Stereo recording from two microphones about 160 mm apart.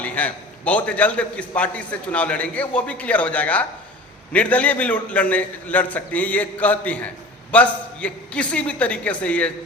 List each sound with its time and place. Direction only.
0.0 s a man's voice: 10° left (ahead or behind)